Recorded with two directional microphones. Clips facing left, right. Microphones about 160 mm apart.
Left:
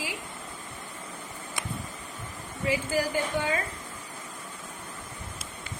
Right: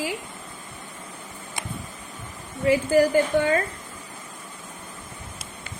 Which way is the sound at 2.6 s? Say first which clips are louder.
Right 9 dB; 50° right (ahead or behind).